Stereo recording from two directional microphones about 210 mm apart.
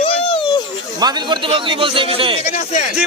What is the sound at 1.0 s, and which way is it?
Speech, 20° right (ahead or behind).